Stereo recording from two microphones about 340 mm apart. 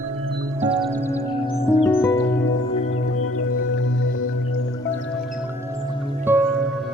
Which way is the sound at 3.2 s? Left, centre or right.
Left.